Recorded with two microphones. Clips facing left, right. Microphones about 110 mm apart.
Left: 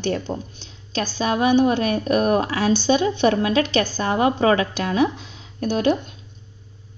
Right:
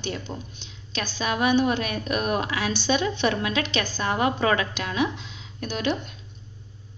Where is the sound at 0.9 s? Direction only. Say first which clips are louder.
Left 5 dB; 35° left (ahead or behind).